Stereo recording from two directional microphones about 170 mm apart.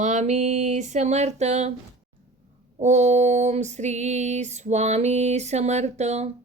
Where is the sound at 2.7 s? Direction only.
45° right (ahead or behind).